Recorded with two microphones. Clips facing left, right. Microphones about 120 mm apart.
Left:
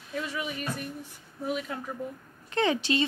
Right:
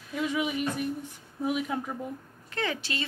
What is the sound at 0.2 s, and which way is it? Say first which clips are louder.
Speech: right 7 dB; 15° right (ahead or behind).